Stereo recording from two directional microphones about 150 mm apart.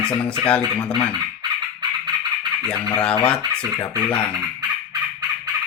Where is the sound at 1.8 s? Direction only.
30° right (ahead or behind).